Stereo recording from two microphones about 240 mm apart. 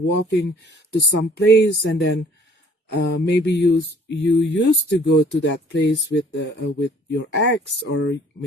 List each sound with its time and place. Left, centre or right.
0.3 s speech: left